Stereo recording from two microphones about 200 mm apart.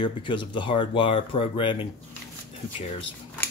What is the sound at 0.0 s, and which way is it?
Speech, 25° left (ahead or behind).